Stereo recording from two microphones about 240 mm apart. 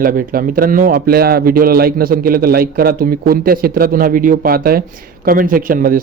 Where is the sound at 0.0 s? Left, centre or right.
Right.